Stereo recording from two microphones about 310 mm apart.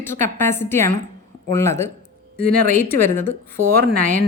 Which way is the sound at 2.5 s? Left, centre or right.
Right.